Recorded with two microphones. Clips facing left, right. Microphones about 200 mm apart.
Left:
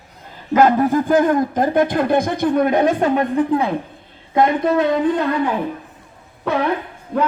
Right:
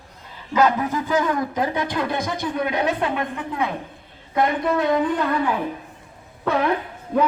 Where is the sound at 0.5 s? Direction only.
50° left (ahead or behind); by 3.7 s 35° left (ahead or behind).